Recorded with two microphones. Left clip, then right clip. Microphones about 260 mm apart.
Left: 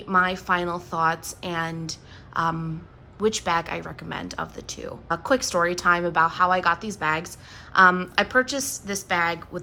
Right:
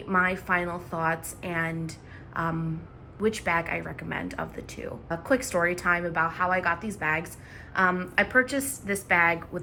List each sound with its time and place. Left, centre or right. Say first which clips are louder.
0.1 s a woman's voice: left 3 dB; centre